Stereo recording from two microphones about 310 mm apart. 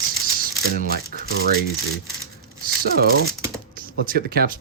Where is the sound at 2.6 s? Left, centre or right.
Right.